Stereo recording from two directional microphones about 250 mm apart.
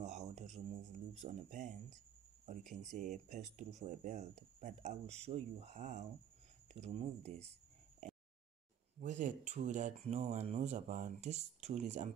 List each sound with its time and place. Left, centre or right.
0.0 s a sound: right
1.2 s speech: right
2.6 s speech: centre
2.9 s speech: right
9.0 s speech: right